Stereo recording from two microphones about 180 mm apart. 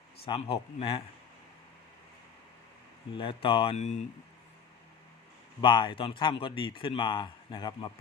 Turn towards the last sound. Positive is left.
turn(degrees=25)  # may be behind; listen again after turning